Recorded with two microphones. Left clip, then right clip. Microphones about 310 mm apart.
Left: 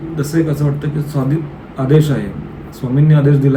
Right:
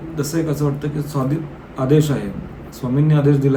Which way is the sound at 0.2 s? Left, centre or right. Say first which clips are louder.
Left 3 dB; centre.